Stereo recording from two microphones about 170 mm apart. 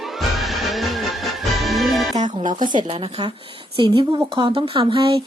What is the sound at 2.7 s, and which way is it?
Speech, 30° right (ahead or behind).